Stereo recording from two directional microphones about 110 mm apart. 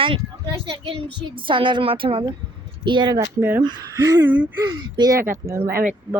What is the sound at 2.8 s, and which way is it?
A woman's voice, 45° right (ahead or behind).